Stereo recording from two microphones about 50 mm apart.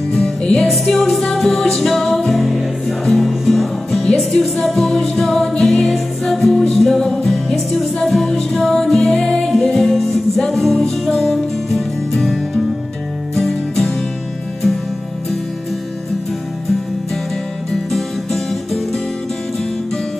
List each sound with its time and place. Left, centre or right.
0.1 s music: centre
17.9 s music: centre